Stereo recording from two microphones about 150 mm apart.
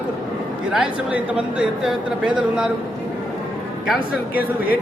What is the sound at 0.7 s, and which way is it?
Speech, 10° right (ahead or behind).